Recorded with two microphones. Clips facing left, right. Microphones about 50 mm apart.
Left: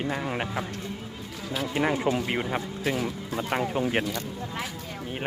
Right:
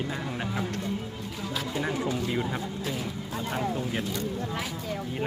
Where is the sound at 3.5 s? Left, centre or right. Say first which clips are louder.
Left 4 dB; left.